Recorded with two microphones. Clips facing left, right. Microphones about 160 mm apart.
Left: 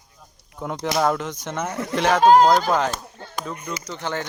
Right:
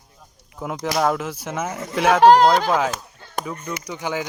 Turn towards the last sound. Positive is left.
turn(degrees=-10)  # may be behind; listen again after turning